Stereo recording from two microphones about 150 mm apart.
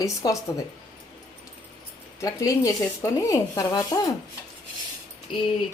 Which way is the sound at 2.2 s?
20° left (ahead or behind).